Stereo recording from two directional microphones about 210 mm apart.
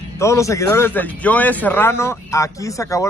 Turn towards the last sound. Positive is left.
turn(degrees=15)  # may be behind; listen again after turning